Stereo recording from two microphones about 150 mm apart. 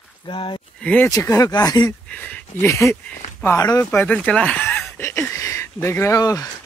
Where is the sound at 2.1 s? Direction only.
10° left (ahead or behind).